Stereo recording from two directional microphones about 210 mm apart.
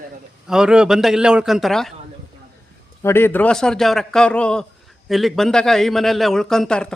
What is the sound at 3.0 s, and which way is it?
A man's voice, 10° left (ahead or behind).